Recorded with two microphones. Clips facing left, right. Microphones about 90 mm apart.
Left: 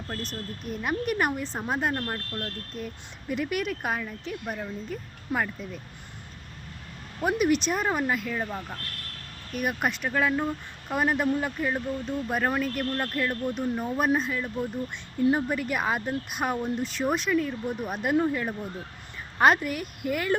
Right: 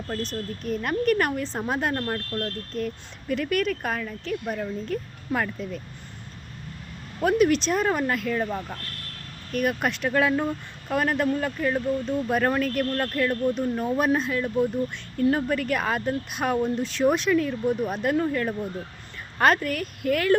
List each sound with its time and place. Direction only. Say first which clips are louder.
0.1 s speech: right 5 dB; 5° left (ahead or behind)
7.3 s speech: right 3 dB; 10° left (ahead or behind)
9.5 s speech: right 3 dB; 10° left (ahead or behind)
10.8 s speech: right 1 dB; 10° left (ahead or behind)
15.3 s speech: right 2 dB; 10° left (ahead or behind)